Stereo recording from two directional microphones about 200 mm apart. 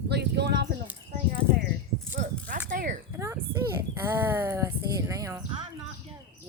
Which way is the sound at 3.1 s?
15° right (ahead or behind).